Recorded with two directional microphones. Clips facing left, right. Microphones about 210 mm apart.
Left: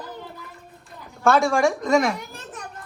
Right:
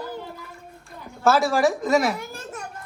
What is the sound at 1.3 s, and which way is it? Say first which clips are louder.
Speech: even; 5° right (ahead or behind).